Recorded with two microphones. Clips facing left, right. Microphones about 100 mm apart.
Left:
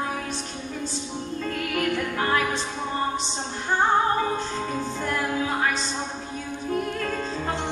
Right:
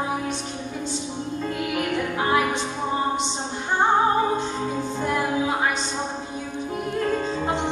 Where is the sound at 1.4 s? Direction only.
15° right (ahead or behind).